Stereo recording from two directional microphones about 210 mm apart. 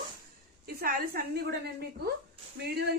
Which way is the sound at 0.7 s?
45° right (ahead or behind).